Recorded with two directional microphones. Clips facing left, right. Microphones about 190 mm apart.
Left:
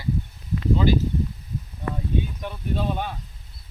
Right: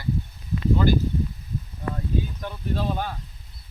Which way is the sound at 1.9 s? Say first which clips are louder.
Left 1 dB; 10° left (ahead or behind).